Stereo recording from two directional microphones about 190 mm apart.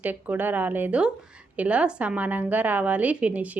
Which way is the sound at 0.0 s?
10° right (ahead or behind).